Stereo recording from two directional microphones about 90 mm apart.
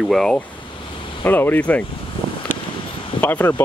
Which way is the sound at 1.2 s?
20° left (ahead or behind).